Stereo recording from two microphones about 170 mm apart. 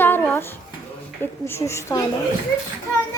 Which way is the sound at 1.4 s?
15° left (ahead or behind).